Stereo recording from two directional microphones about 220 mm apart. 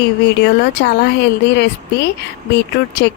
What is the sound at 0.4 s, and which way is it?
Speech, 50° left (ahead or behind).